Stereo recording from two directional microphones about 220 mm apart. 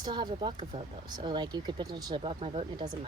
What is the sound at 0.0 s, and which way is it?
Speech, 20° right (ahead or behind).